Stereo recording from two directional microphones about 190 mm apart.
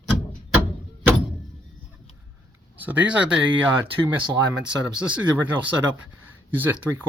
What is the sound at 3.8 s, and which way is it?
Speech, 25° right (ahead or behind).